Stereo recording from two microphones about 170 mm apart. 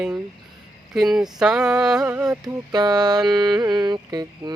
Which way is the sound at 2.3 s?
20° right (ahead or behind).